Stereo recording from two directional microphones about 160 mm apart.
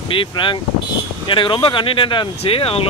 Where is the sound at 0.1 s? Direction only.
30° left (ahead or behind).